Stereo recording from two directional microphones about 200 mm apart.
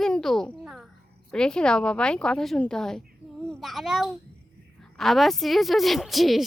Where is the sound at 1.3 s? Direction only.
5° left (ahead or behind).